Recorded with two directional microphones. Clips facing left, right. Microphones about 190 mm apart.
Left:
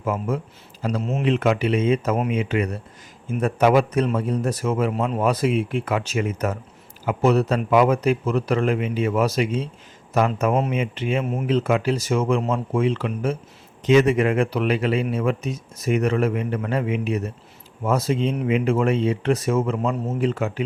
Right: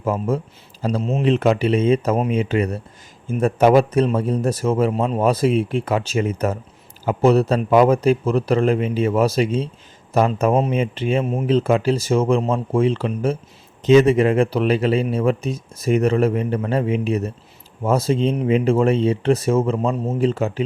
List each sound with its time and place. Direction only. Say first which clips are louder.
0.0 s speech: right 3 dB; 30° right (ahead or behind)